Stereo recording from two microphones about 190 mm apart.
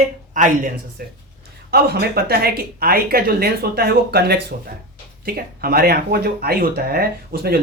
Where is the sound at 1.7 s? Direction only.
55° right (ahead or behind).